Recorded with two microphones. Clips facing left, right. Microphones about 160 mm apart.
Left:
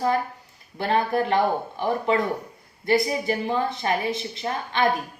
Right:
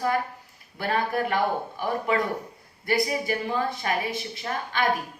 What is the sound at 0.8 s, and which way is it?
A woman's voice, 25° left (ahead or behind).